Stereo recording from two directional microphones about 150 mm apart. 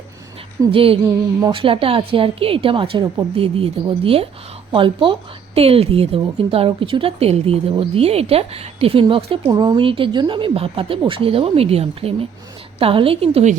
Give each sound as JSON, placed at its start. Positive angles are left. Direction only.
{"t": 0.7, "sound": "a woman's voice", "side_deg": -40}